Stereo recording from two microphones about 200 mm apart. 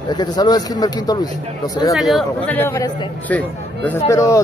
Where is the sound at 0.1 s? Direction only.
20° left (ahead or behind).